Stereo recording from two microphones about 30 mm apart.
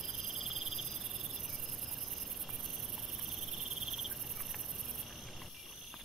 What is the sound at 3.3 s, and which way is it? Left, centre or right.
Cricket, centre.